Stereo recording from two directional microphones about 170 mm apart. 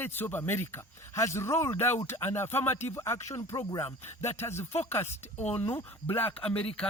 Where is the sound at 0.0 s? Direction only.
10° left (ahead or behind).